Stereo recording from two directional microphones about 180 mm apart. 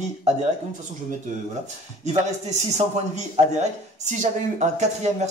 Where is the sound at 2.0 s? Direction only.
40° right (ahead or behind).